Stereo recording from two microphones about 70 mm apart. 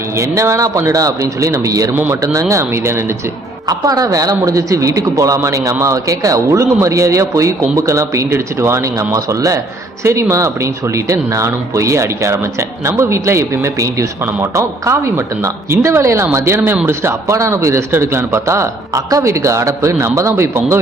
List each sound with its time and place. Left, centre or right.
0.2 s speech: right
1.9 s speech: right
3.7 s speech: right
10.0 s speech: right